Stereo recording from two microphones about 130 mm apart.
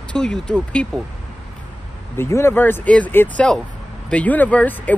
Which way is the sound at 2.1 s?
20° left (ahead or behind).